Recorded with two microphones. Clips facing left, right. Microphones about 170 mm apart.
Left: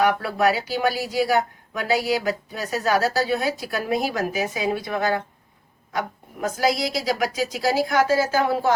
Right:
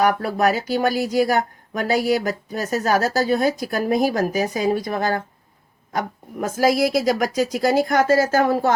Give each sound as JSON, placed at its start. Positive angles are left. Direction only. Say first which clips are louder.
{"t": 0.0, "sound": "speech", "louder": "right 2 dB", "side_deg": -45}